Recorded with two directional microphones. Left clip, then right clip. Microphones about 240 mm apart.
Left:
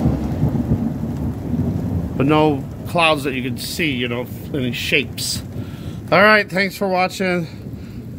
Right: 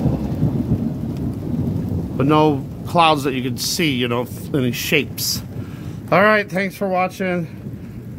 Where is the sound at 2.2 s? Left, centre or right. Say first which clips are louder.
Even; centre.